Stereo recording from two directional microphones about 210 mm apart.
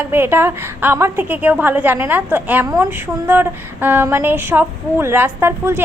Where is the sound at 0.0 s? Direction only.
10° right (ahead or behind).